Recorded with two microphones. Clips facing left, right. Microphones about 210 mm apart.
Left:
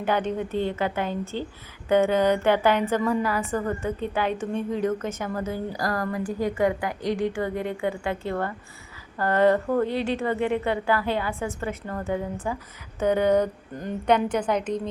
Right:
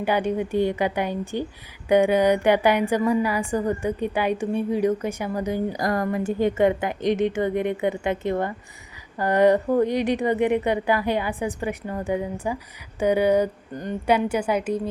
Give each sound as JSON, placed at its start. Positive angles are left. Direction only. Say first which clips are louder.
{"t": 0.0, "sound": "a woman's voice", "louder": "right 2 dB", "side_deg": -10}
{"t": 13.7, "sound": "a woman's voice", "louder": "even", "side_deg": 0}